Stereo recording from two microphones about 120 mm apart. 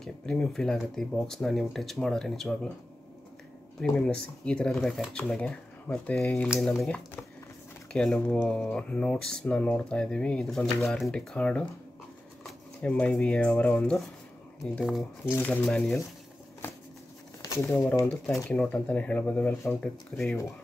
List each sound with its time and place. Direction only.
0.0 s speech: 5° left (ahead or behind)
3.8 s speech: 5° left (ahead or behind)
15.2 s speech: 15° left (ahead or behind)
17.4 s speech: 25° left (ahead or behind)
19.8 s speech: 10° left (ahead or behind)